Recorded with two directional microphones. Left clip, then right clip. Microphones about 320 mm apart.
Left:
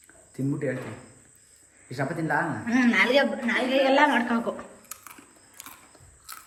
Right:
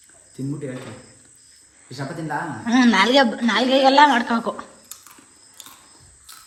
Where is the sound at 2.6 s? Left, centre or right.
Centre.